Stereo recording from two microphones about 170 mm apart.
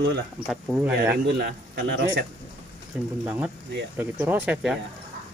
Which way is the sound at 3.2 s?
10° right (ahead or behind).